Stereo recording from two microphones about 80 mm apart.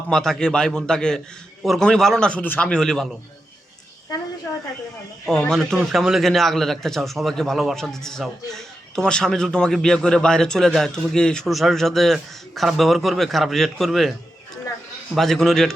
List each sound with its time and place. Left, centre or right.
0.1 s a man's voice: centre
2.4 s speech: left
2.6 s a man's voice: centre
5.5 s a man's voice: centre
15.1 s speech: centre